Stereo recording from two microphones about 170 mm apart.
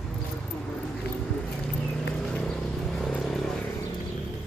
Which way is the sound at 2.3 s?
5° left (ahead or behind).